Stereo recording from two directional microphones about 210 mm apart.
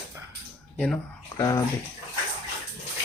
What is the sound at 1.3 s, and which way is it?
Speech, 15° left (ahead or behind).